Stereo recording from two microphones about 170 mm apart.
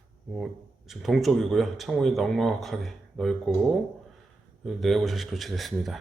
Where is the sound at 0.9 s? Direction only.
Centre (ahead or behind).